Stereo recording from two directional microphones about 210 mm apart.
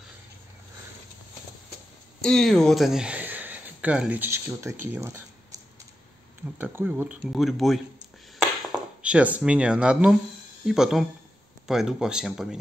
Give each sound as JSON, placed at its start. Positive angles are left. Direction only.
{"t": 2.2, "sound": "speech", "side_deg": 0}
{"t": 6.6, "sound": "speech", "side_deg": -10}
{"t": 9.0, "sound": "speech", "side_deg": -5}